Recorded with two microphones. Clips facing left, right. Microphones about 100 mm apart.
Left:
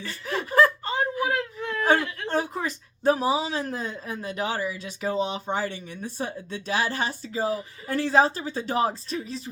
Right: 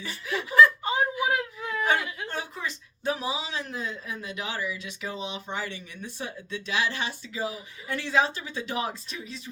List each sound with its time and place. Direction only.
0.3 s snicker: 45° left (ahead or behind)
1.2 s whimper: 10° right (ahead or behind)
2.3 s a woman's voice: 40° left (ahead or behind)